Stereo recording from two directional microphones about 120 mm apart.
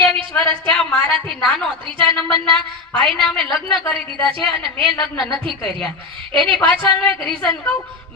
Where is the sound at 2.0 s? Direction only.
45° right (ahead or behind).